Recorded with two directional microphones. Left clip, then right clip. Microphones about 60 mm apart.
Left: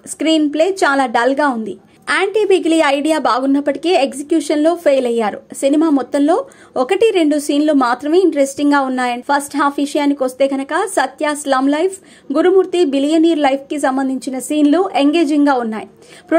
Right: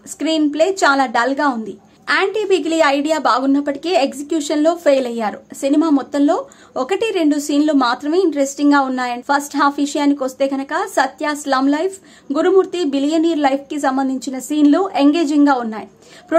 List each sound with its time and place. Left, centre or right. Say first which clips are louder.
0.5 s speech: left 1 dB; left
0.8 s a woman's voice: left 1 dB; left
2.2 s speech: left 3 dB; left
7.8 s speech: left 3 dB; left
9.3 s a woman's voice: right 1 dB; left
10.5 s a woman's voice: left 2 dB; left
15.0 s a woman's voice: left 1 dB; left